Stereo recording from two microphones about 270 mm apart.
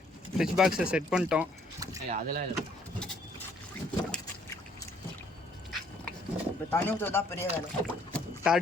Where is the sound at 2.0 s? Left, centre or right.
Right.